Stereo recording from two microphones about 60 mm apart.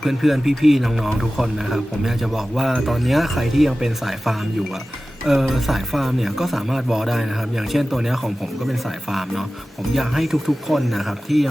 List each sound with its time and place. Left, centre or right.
0.0 s a man's voice: centre